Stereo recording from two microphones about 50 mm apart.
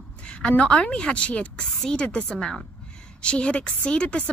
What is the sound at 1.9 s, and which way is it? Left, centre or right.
Speech, centre.